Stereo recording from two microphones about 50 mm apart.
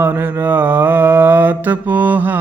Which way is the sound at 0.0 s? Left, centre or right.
Right.